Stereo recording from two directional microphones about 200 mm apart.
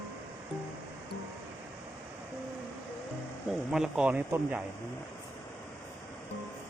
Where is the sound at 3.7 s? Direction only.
5° right (ahead or behind).